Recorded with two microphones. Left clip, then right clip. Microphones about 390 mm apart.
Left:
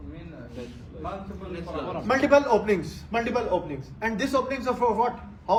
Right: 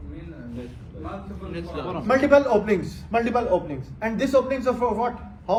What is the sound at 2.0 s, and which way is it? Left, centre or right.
A man's voice, centre.